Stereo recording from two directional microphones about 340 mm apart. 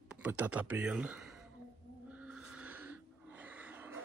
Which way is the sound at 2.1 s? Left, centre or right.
Centre.